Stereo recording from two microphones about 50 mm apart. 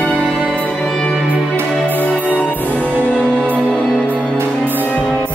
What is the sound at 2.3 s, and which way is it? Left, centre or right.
Music, left.